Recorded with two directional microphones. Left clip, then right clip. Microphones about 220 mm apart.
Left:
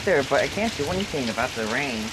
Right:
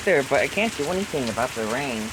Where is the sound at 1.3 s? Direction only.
15° right (ahead or behind).